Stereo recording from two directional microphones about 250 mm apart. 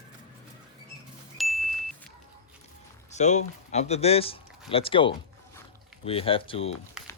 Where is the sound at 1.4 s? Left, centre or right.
Centre.